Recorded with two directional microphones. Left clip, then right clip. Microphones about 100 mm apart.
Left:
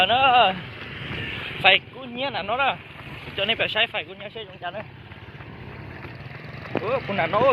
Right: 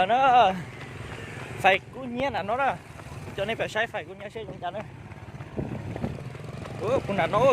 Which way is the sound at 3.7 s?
45° right (ahead or behind).